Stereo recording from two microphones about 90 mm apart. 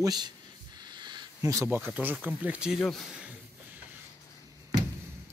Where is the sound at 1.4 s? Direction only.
35° right (ahead or behind).